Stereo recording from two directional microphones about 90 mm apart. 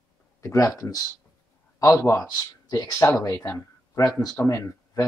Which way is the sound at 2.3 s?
45° left (ahead or behind).